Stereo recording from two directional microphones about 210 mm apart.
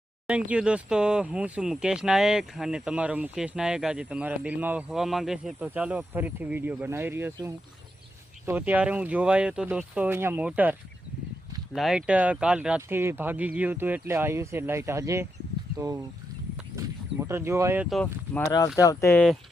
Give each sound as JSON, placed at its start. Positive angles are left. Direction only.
{"t": 0.3, "sound": "speech", "side_deg": -5}
{"t": 16.7, "sound": "a sound", "side_deg": -10}
{"t": 17.8, "sound": "speech", "side_deg": 5}
{"t": 18.8, "sound": "speech", "side_deg": 15}